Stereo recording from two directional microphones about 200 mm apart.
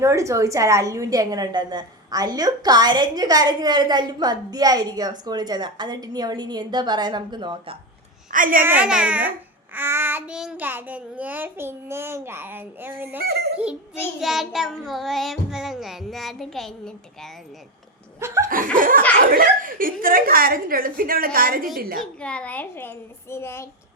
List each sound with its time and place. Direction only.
0.0 s a woman's voice: 15° right (ahead or behind)
8.3 s a woman's voice: 45° right (ahead or behind)
8.6 s a child's voice: 5° right (ahead or behind)
13.2 s a woman's voice: 50° right (ahead or behind)
14.2 s child singing: centre (ahead or behind)
18.4 s a woman's voice: 45° right (ahead or behind)
22.0 s a child's voice: 5° left (ahead or behind)